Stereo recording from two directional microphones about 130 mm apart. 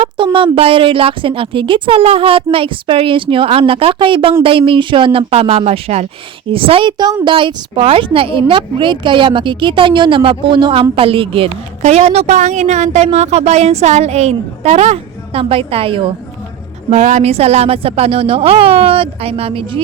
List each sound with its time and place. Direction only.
0.3 s a woman's voice: 45° right (ahead or behind)
11.8 s a woman's voice: 55° right (ahead or behind)
16.9 s a woman's voice: 65° right (ahead or behind); by 19.8 s 45° right (ahead or behind)